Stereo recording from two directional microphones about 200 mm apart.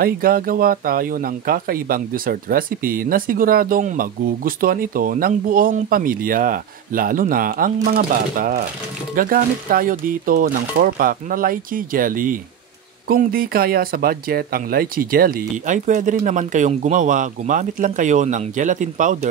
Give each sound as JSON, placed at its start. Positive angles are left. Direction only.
{"t": 0.0, "sound": "speech", "side_deg": -45}